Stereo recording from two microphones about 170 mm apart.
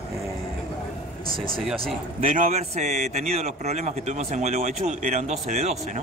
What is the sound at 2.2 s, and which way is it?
A man's voice, 50° right (ahead or behind).